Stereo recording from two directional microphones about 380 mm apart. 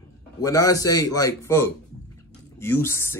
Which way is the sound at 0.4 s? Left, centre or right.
Centre.